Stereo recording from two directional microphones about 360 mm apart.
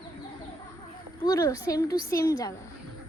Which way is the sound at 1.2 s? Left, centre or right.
Centre.